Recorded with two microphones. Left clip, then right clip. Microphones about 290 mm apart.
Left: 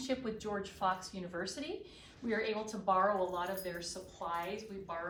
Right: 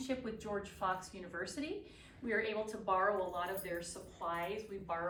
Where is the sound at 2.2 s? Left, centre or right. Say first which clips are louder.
Even; left.